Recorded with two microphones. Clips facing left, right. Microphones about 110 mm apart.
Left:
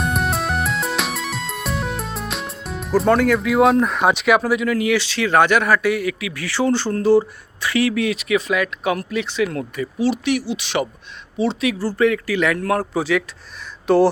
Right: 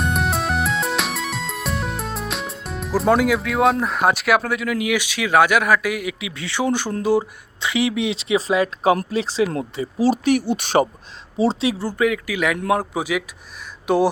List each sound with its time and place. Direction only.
0.0 s music: centre (ahead or behind); by 10.8 s 45° right (ahead or behind)
11.3 s speech: 35° right (ahead or behind)
11.8 s speech: 10° right (ahead or behind)